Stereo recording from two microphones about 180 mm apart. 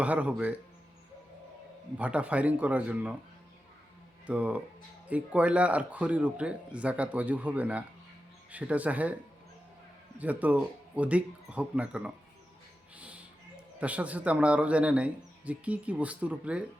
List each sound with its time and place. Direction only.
0.0 s a man's voice: 10° right (ahead or behind)
2.0 s a man's voice: 5° right (ahead or behind)
4.3 s a man's voice: 10° right (ahead or behind)
10.2 s a man's voice: 10° right (ahead or behind)
13.0 s music: 5° right (ahead or behind)
13.7 s a man's voice: 10° right (ahead or behind)